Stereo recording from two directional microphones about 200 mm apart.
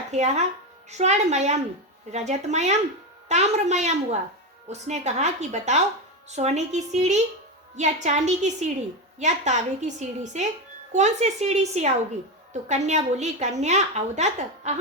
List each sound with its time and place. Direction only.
0.1 s a woman's voice: 35° right (ahead or behind)